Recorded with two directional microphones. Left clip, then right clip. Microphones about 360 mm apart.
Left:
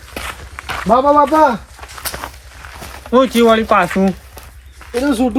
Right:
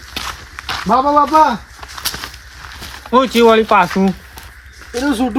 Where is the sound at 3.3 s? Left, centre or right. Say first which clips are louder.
Right 1 dB; right.